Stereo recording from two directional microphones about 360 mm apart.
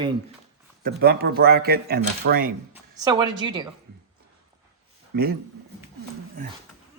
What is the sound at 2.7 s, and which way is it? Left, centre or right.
Speech, centre.